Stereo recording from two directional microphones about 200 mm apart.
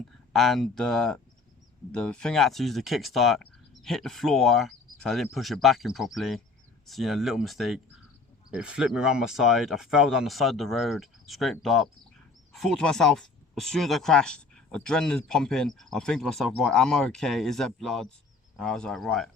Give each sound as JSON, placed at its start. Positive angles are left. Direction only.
{"t": 0.3, "sound": "speech", "side_deg": 0}